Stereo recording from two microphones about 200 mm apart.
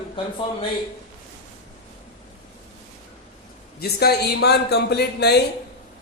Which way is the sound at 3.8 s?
50° left (ahead or behind).